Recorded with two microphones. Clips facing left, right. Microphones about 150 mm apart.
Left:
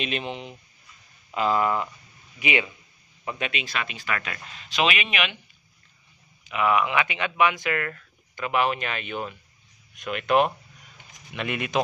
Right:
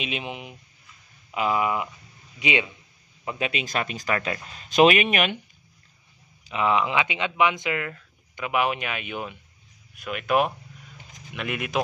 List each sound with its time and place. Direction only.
0.0 s speech: 10° right (ahead or behind)
2.3 s speech: 20° right (ahead or behind)
3.3 s speech: 35° right (ahead or behind)
4.6 s speech: 45° right (ahead or behind)
6.4 s speech: 25° right (ahead or behind); by 11.8 s 5° right (ahead or behind)